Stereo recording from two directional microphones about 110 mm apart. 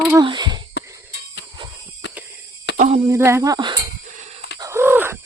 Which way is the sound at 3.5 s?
45° right (ahead or behind).